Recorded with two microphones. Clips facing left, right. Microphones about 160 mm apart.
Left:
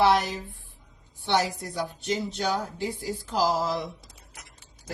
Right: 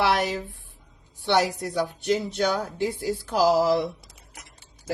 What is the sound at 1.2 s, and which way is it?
A woman's voice, 70° right (ahead or behind).